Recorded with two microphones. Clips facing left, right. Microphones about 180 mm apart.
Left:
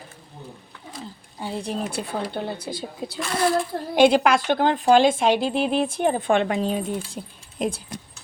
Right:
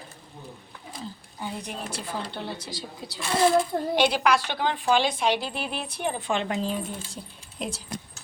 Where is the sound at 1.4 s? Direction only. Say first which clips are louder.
Left 5 dB; 30° left (ahead or behind).